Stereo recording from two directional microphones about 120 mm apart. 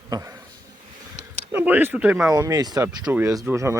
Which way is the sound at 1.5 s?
15° right (ahead or behind).